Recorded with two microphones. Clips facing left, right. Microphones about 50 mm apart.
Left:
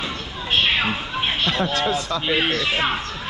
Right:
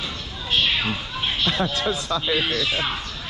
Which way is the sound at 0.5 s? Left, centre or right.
Left.